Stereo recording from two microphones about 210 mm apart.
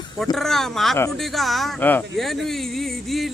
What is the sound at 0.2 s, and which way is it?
Speech, centre (ahead or behind).